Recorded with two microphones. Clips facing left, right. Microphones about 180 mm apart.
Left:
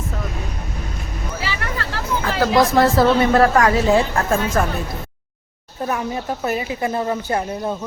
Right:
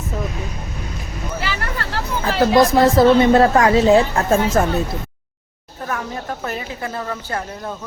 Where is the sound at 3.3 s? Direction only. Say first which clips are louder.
Right 2 dB; 25° right (ahead or behind).